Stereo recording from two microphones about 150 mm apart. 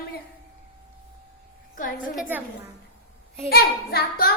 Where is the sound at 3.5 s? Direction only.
90° left.